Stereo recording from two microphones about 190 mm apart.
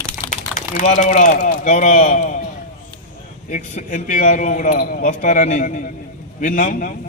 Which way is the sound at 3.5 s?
40° left (ahead or behind).